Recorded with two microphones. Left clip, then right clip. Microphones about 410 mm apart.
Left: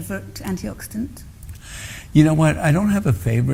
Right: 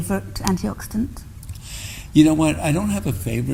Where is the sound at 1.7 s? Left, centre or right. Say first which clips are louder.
Right 2 dB; left.